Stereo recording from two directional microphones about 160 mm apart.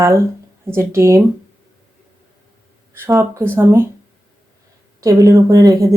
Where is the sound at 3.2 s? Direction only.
15° right (ahead or behind).